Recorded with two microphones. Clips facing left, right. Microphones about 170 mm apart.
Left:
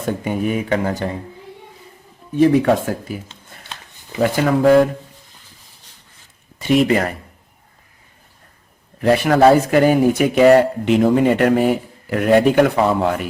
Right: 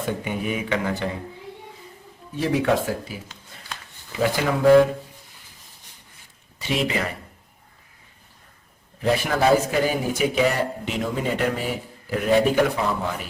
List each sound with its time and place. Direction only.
0.0 s speech: 45° left (ahead or behind)
2.3 s speech: 55° left (ahead or behind)
4.2 s speech: 50° left (ahead or behind)
6.6 s speech: 50° left (ahead or behind)
9.0 s speech: 65° left (ahead or behind)